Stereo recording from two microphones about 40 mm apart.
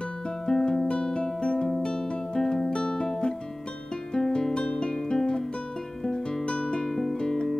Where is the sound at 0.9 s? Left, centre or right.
Centre.